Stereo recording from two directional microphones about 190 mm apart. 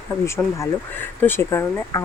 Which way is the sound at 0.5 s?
10° left (ahead or behind).